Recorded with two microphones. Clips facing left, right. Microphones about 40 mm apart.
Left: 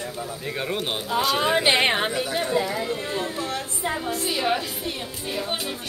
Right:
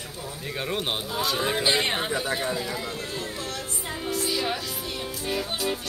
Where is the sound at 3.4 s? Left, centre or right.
Left.